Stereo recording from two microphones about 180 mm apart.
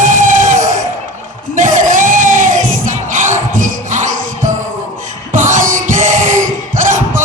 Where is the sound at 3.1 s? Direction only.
45° right (ahead or behind).